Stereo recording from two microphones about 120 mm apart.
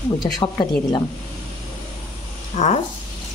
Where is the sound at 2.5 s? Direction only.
60° left (ahead or behind).